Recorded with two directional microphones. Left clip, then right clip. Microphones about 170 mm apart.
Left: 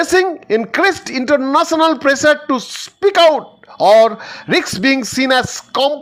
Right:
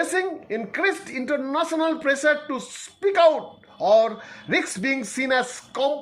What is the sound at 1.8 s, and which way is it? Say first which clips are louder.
Speech: left 9 dB; 35° left (ahead or behind).